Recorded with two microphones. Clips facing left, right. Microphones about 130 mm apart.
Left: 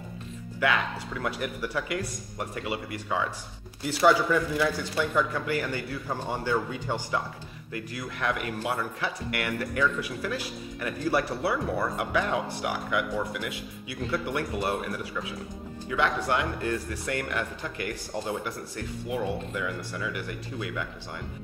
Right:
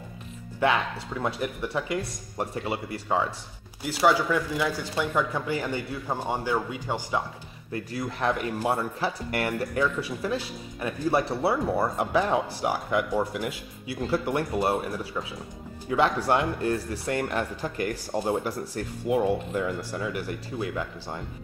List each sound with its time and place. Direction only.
1.2 s speech: 25° right (ahead or behind)
4.0 s speech: 10° right (ahead or behind)
7.7 s speech: 35° right (ahead or behind)